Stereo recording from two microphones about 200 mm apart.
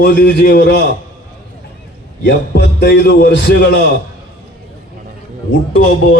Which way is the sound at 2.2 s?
60° left (ahead or behind).